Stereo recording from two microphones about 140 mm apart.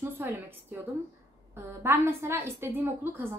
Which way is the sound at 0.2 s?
15° right (ahead or behind).